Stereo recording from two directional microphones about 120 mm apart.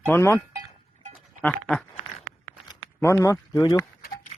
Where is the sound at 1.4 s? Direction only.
10° left (ahead or behind).